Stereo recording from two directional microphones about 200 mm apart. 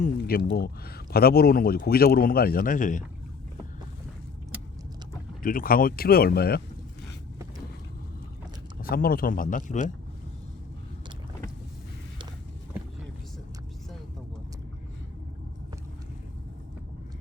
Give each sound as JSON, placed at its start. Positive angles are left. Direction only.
{"t": 0.2, "sound": "speech", "side_deg": 50}
{"t": 5.4, "sound": "speech", "side_deg": 45}
{"t": 8.8, "sound": "speech", "side_deg": 45}